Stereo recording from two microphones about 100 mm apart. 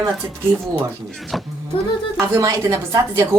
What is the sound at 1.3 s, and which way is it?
Speech, centre (ahead or behind).